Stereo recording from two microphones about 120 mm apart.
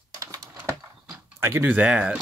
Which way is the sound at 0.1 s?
30° right (ahead or behind).